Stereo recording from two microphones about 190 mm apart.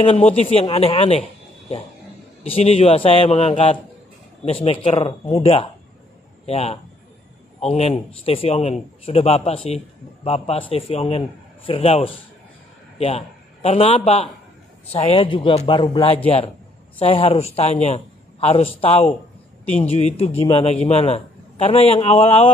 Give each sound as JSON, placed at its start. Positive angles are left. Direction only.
{"t": 0.0, "sound": "speech", "side_deg": 30}
{"t": 2.4, "sound": "a man's voice", "side_deg": 30}